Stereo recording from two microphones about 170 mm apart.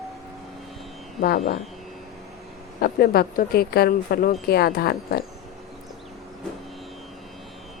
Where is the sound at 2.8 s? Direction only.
65° left (ahead or behind).